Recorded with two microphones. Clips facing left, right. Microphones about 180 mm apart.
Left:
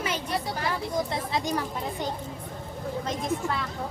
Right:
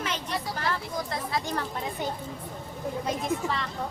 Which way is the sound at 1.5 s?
10° left (ahead or behind).